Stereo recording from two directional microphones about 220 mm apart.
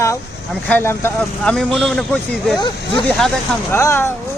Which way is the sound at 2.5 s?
20° left (ahead or behind).